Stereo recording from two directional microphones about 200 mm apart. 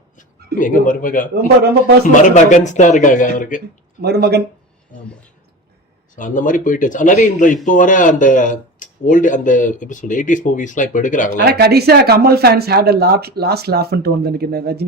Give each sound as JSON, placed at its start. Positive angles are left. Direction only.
{"t": 0.2, "sound": "speech", "side_deg": 40}
{"t": 4.0, "sound": "speech", "side_deg": -55}
{"t": 6.1, "sound": "speech", "side_deg": 40}
{"t": 11.4, "sound": "speech", "side_deg": -50}